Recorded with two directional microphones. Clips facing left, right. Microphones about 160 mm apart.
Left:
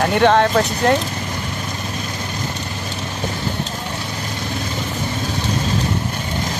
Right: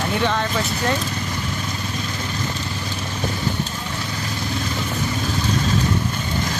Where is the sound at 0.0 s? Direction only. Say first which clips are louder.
Left 8 dB; 60° left (ahead or behind).